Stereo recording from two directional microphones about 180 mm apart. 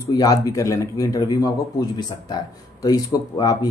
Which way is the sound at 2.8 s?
20° left (ahead or behind).